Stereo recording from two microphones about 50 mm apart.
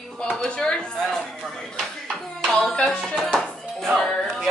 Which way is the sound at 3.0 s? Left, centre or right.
Centre.